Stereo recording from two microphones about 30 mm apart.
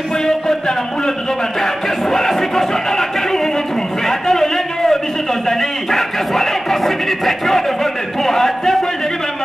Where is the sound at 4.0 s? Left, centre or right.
Centre.